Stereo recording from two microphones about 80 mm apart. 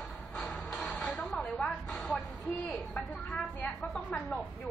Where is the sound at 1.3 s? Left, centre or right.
Centre.